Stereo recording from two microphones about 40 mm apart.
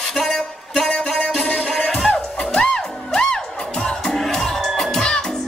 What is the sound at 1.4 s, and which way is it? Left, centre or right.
Music, left.